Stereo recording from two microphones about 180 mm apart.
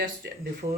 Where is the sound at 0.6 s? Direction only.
35° right (ahead or behind).